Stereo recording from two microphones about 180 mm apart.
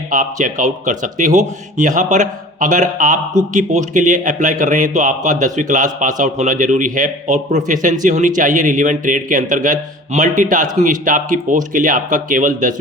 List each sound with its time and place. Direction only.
0.1 s speech: 45° right (ahead or behind)